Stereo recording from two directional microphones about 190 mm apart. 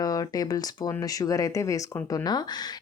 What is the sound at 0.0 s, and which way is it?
Speech, 20° left (ahead or behind).